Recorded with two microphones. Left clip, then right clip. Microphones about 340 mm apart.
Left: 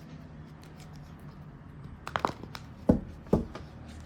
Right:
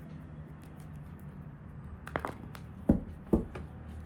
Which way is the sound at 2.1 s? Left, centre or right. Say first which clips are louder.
Left 6 dB; left.